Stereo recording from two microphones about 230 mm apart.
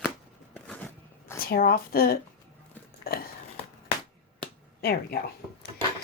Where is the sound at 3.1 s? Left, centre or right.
Left.